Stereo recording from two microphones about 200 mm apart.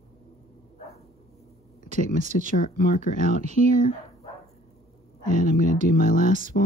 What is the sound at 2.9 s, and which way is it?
Speech, 35° right (ahead or behind).